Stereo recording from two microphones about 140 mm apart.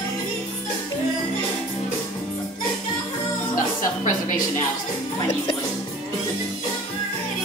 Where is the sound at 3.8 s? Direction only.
75° left (ahead or behind).